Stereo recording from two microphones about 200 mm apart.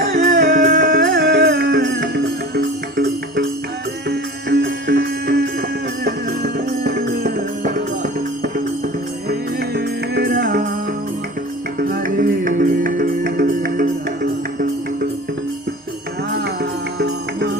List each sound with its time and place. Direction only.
0.3 s music: 40° right (ahead or behind)
1.0 s music: 60° right (ahead or behind)
9.7 s music: 50° right (ahead or behind)
11.8 s music: 45° right (ahead or behind)
16.3 s music: 60° right (ahead or behind)